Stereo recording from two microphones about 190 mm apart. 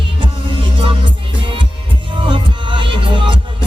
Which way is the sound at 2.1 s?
25° right (ahead or behind).